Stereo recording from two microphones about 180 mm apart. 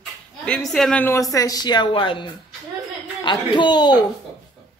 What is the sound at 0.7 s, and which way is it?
A woman's voice, 5° left (ahead or behind).